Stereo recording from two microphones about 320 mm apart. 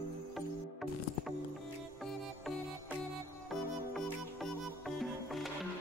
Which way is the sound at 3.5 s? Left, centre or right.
Centre.